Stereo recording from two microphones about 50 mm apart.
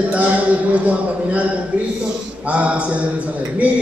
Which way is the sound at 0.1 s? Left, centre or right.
Right.